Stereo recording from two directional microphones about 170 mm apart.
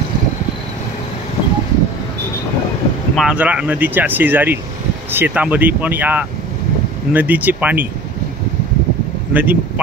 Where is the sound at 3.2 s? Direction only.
5° right (ahead or behind).